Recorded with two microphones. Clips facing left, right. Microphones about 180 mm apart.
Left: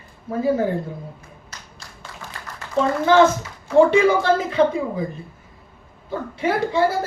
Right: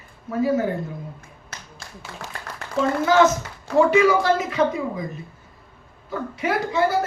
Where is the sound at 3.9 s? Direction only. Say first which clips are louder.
Left 1 dB; 30° left (ahead or behind).